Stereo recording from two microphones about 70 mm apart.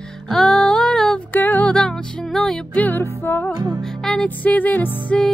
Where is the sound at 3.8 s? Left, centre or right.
Centre.